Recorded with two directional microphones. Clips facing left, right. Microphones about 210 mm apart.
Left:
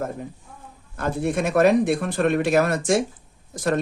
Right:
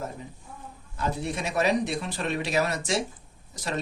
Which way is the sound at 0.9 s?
55° left (ahead or behind).